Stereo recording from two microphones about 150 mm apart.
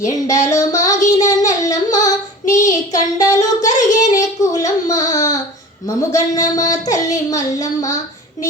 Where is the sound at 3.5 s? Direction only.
55° left (ahead or behind).